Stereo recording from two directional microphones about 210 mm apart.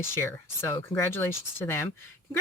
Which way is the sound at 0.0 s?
10° left (ahead or behind).